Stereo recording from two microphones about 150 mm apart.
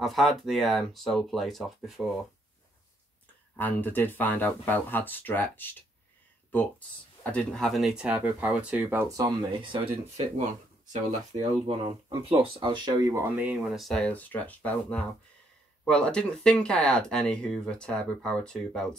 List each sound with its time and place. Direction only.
0.0 s speech: centre (ahead or behind)
3.5 s speech: 10° left (ahead or behind)
7.2 s speech: 5° left (ahead or behind)
9.0 s speech: 25° right (ahead or behind); by 10.4 s 40° right (ahead or behind)
10.9 s speech: 50° right (ahead or behind)
12.3 s speech: 35° right (ahead or behind); by 18.9 s 5° left (ahead or behind)